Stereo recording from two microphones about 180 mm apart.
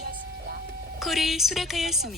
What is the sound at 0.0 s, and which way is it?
Whispering, 60° right (ahead or behind).